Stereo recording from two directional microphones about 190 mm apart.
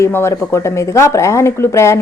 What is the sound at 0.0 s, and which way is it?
A woman's voice, 15° left (ahead or behind).